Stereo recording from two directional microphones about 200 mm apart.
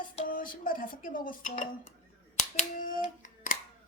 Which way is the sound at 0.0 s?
45° left (ahead or behind).